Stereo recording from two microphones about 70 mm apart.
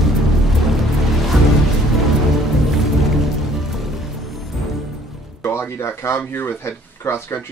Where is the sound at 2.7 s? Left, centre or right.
Centre.